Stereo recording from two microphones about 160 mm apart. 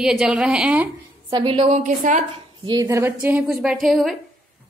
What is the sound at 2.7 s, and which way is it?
Speech, 20° right (ahead or behind).